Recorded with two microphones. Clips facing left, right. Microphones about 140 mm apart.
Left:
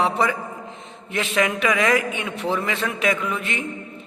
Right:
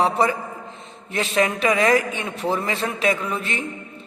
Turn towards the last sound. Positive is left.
turn(degrees=-35)  # may be behind; listen again after turning